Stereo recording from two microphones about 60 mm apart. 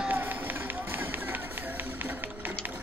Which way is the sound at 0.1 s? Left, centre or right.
Right.